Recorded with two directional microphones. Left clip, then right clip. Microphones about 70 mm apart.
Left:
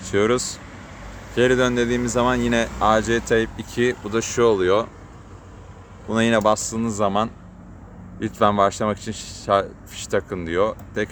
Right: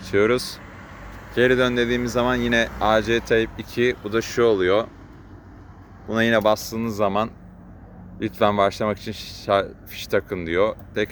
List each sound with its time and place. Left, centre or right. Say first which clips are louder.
0.0 s speech: even; centre
6.1 s speech: even; centre; by 11.1 s right